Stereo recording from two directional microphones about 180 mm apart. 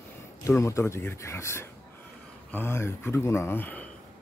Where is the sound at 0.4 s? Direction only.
15° left (ahead or behind).